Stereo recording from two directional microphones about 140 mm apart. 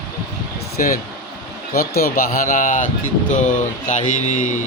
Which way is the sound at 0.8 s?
75° left (ahead or behind).